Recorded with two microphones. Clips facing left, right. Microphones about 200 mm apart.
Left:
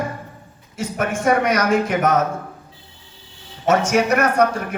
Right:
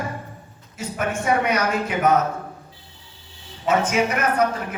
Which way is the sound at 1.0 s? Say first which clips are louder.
Left 3 dB; 50° left (ahead or behind).